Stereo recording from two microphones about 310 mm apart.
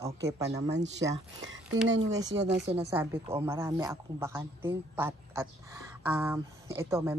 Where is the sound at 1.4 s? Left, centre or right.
Right.